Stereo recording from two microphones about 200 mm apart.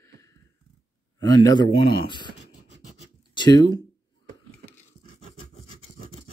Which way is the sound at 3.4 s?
20° left (ahead or behind).